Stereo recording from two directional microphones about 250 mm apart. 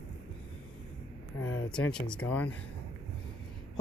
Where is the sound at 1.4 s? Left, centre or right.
Left.